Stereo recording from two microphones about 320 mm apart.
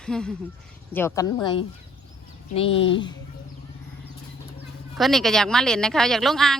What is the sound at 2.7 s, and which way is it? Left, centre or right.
Speech, left.